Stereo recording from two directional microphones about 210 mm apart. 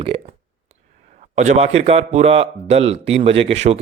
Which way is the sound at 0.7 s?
35° right (ahead or behind).